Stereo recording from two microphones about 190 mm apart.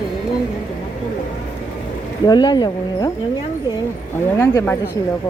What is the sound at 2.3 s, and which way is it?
Speech, 20° left (ahead or behind).